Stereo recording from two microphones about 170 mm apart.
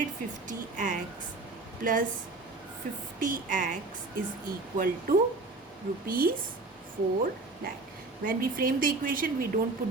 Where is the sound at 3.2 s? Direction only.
50° right (ahead or behind).